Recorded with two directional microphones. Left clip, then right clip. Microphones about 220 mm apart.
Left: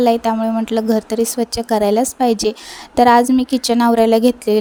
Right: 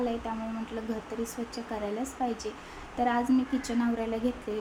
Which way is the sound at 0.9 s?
45° left (ahead or behind).